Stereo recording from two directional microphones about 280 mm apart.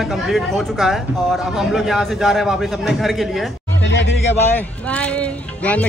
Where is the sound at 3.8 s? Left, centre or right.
Left.